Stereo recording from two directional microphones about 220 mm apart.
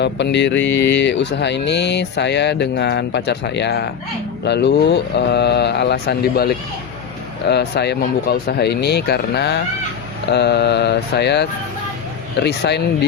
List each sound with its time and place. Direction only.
0.0 s mantra: 50° left (ahead or behind)